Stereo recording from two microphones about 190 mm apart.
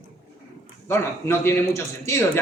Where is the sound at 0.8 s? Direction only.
15° left (ahead or behind).